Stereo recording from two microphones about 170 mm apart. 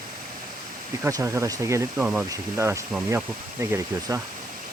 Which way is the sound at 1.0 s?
15° right (ahead or behind).